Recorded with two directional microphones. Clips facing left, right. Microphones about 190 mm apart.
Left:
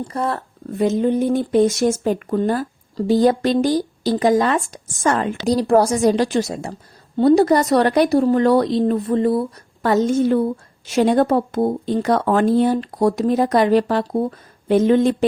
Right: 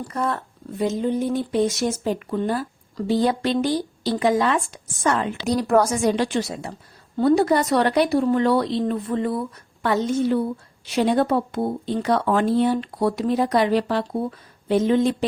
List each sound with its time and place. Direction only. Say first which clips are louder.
0.0 s speech: left 2 dB; 30° left (ahead or behind)
0.8 s speech: left 5 dB; 55° left (ahead or behind)
5.5 s speech: left 4 dB; 30° left (ahead or behind); by 15.1 s 55° left (ahead or behind)